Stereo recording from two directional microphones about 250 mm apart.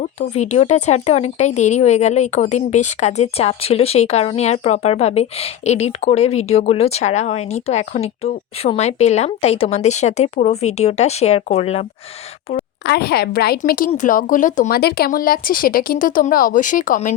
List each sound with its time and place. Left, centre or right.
0.0 s speech: left
12.8 s speech: left